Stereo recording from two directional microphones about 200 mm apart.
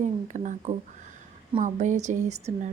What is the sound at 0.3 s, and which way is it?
A woman's voice, 40° right (ahead or behind).